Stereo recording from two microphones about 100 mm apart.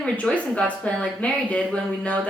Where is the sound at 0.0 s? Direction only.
10° left (ahead or behind).